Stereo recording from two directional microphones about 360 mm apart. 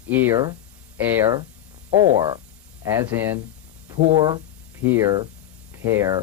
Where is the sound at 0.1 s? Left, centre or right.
Centre.